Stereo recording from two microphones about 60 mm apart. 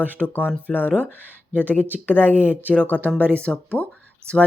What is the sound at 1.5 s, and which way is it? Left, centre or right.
Speech, right.